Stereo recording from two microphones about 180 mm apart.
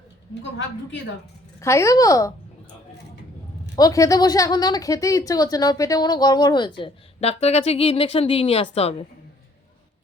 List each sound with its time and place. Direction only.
1.6 s a woman's voice: 15° left (ahead or behind)
3.8 s a woman's voice: 20° left (ahead or behind)